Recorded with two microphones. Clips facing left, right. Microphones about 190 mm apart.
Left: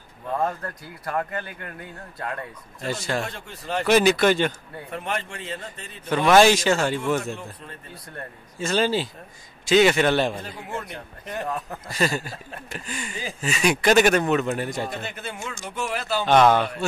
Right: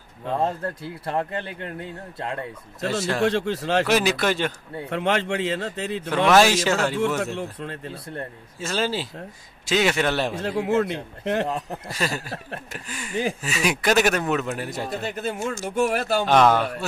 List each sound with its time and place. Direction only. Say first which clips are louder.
0.3 s speech: right 2 dB; 30° right (ahead or behind)
3.2 s a man's voice: right 10 dB; 80° right
3.8 s speech: left 8 dB; centre (ahead or behind)
4.8 s a man's voice: right 7 dB; 80° right
6.1 s speech: left 1 dB; centre (ahead or behind)
7.2 s a man's voice: right 3 dB; 75° right (ahead or behind)
8.5 s speech: left 3 dB; 5° right (ahead or behind)
10.3 s a man's voice: right 11 dB; 80° right
11.4 s speech: right 2 dB; 25° right (ahead or behind)
11.9 s speech: left 3 dB; 5° right (ahead or behind)
15.0 s speech: right 6 dB; 40° right (ahead or behind)
15.7 s speech: right 6 dB; 50° right (ahead or behind)
16.3 s speech: left 2 dB; 5° right (ahead or behind)